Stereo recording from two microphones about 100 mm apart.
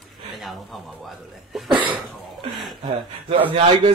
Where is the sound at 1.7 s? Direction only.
55° right (ahead or behind).